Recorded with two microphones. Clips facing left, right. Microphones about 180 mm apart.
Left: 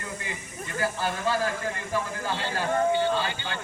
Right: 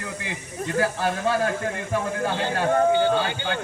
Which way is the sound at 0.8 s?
65° right (ahead or behind).